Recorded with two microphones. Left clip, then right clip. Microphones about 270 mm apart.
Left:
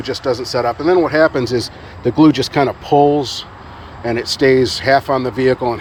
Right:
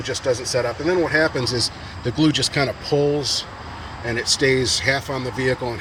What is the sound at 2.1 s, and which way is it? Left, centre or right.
Speech, centre.